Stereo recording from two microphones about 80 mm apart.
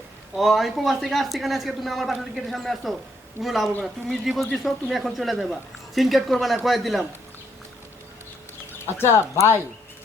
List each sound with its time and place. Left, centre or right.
0.3 s a man's voice: centre
9.0 s speech: left